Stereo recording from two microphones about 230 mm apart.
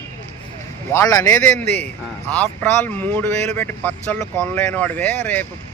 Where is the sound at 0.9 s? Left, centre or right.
Centre.